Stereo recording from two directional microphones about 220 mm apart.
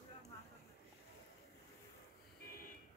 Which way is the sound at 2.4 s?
40° left (ahead or behind).